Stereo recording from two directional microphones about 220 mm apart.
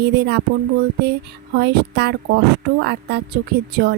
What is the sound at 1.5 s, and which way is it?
A woman's voice, 50° right (ahead or behind).